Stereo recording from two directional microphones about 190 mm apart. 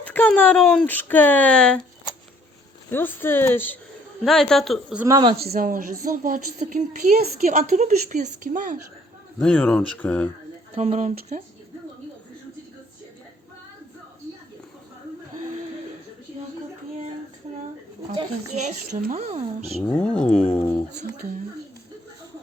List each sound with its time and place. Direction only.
0.0 s speech: 10° left (ahead or behind)
2.9 s speech: 10° left (ahead or behind)
5.0 s speech: 20° right (ahead or behind)
5.4 s a woman's voice: 50° right (ahead or behind)
9.4 s speech: 5° left (ahead or behind)
10.8 s speech: 35° right (ahead or behind)
18.5 s speech: 40° right (ahead or behind)
19.8 s speech: 5° left (ahead or behind)